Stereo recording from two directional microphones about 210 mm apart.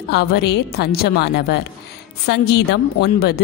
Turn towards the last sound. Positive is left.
turn(degrees=50)  # may be behind; listen again after turning